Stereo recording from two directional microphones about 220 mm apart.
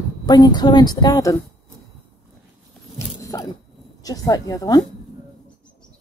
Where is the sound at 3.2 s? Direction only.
15° left (ahead or behind).